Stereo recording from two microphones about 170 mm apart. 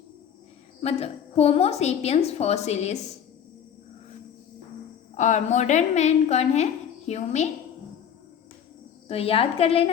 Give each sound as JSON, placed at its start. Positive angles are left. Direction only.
{"t": 0.8, "sound": "a woman's voice", "side_deg": 40}
{"t": 5.1, "sound": "a woman's voice", "side_deg": 45}
{"t": 9.0, "sound": "a woman's voice", "side_deg": 35}